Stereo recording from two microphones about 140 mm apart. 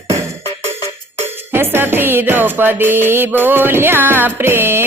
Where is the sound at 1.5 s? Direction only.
15° right (ahead or behind).